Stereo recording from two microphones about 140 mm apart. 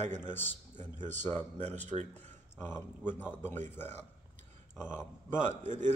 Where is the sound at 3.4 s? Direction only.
15° left (ahead or behind).